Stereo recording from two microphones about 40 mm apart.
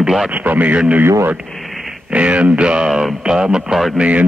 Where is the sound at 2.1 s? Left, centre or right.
Right.